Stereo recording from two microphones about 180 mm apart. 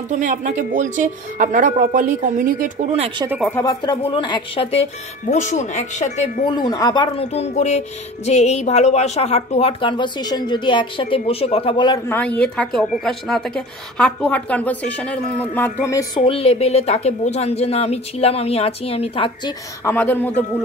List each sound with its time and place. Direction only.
0.2 s speech: 45° right (ahead or behind)
2.9 s speech: 35° right (ahead or behind)
3.4 s a woman's voice: 10° left (ahead or behind)
3.8 s speech: 25° left (ahead or behind)
6.5 s speech: 20° left (ahead or behind)
12.1 s a woman's voice: 10° left (ahead or behind)
16.2 s speech: 30° left (ahead or behind)
19.8 s a woman's voice: 10° left (ahead or behind)